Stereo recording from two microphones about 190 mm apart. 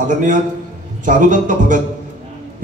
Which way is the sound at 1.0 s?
45° right (ahead or behind).